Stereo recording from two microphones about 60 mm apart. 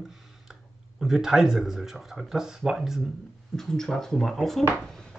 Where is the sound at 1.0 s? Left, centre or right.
Centre.